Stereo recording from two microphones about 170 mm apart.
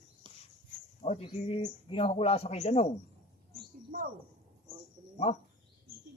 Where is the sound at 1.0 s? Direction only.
40° left (ahead or behind).